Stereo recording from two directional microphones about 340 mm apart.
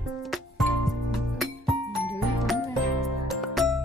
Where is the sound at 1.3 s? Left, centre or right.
Centre.